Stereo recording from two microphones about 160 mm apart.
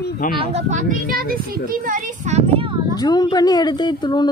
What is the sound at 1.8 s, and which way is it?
Speech, 55° right (ahead or behind).